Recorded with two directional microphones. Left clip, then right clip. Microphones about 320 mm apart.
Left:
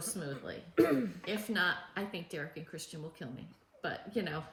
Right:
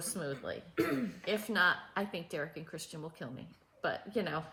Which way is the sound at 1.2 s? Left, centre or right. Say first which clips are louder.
Right 8 dB; centre.